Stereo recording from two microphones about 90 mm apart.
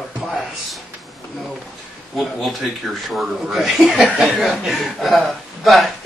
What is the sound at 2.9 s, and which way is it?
Speech, centre (ahead or behind).